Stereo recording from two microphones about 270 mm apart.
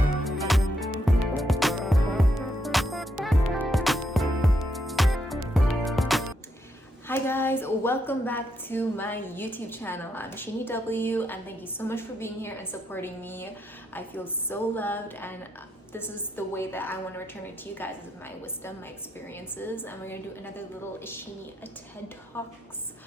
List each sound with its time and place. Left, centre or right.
0.3 s music: centre
7.1 s a woman's voice: centre
19.3 s a woman's voice: centre
22.3 s a woman's voice: centre